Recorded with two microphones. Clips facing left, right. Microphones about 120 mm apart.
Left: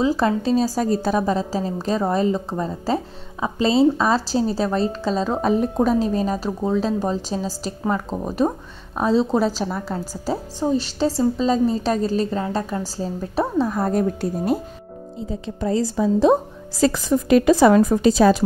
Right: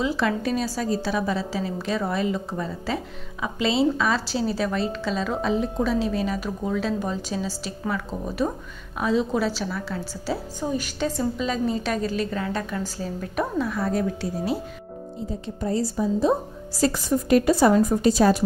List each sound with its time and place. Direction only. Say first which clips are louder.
0.0 s speech: left 5 dB; 40° left (ahead or behind)
5.4 s speech: left 6 dB; 50° left (ahead or behind); by 13.7 s 30° left (ahead or behind)
13.7 s a woman's voice: left 4 dB; 50° left (ahead or behind)
15.6 s a woman's voice: left 4 dB; 90° left